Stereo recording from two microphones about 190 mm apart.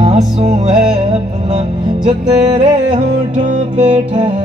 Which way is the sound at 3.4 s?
40° right (ahead or behind).